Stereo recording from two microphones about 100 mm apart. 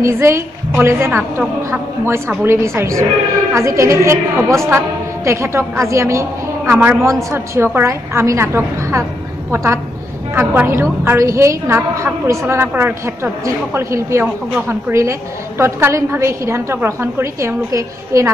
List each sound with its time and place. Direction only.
0.0 s a woman's voice: 25° right (ahead or behind)